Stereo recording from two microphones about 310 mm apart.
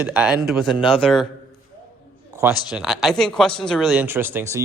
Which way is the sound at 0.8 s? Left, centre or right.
Centre.